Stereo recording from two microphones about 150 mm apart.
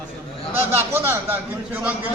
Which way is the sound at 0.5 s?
15° right (ahead or behind).